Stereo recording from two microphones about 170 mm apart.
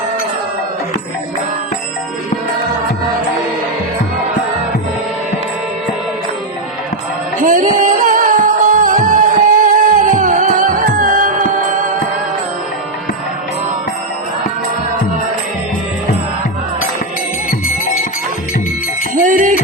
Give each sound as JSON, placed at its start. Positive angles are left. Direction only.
{"t": 7.4, "sound": "music", "side_deg": -50}
{"t": 19.2, "sound": "music", "side_deg": -50}